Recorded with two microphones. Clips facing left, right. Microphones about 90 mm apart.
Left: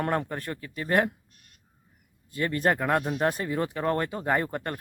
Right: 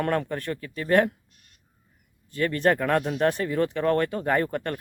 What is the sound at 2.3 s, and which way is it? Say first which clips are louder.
Speech: right 3 dB; 20° left (ahead or behind).